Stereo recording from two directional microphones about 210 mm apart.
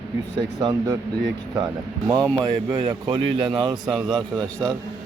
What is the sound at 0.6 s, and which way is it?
Speech, 15° right (ahead or behind).